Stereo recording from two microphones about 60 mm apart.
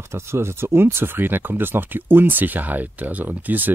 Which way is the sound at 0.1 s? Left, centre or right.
Right.